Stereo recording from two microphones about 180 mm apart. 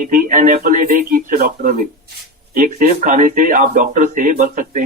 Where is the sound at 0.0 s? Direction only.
50° right (ahead or behind).